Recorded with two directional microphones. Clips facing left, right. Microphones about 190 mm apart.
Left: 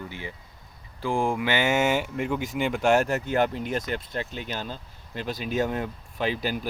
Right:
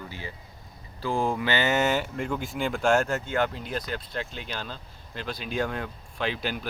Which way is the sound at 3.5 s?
55° left (ahead or behind).